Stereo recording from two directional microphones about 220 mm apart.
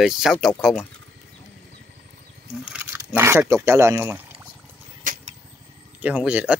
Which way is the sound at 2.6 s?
5° right (ahead or behind).